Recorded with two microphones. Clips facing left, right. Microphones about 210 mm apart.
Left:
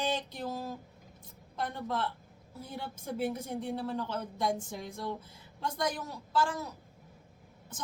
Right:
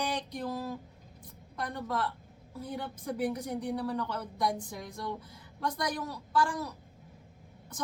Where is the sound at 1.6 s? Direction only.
25° left (ahead or behind).